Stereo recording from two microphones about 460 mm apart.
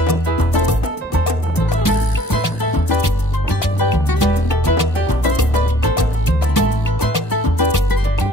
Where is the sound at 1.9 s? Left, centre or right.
Left.